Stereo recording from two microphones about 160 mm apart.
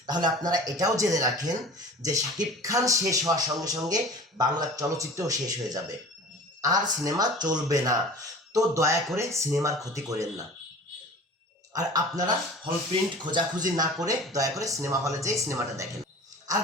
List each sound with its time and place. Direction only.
0.0 s speech: 25° right (ahead or behind)
11.7 s speech: 25° right (ahead or behind)